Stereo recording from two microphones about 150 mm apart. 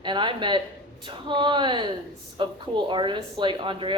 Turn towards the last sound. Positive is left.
turn(degrees=-35)  # may be behind; listen again after turning